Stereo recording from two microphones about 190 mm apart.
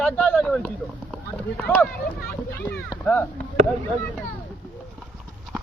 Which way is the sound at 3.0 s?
10° left (ahead or behind).